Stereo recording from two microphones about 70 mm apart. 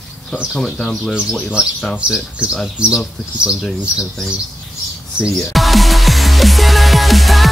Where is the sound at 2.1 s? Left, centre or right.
Centre.